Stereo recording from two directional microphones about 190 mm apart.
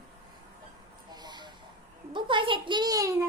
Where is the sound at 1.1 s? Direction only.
20° right (ahead or behind).